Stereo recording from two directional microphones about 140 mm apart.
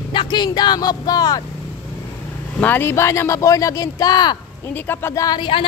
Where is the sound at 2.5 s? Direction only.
15° left (ahead or behind); by 4.7 s 30° left (ahead or behind).